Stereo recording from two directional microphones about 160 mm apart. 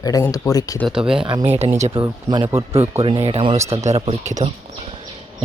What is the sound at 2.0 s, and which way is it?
Speech, 30° right (ahead or behind).